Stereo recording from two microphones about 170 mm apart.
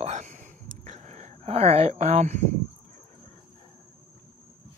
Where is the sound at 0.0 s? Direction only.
45° right (ahead or behind).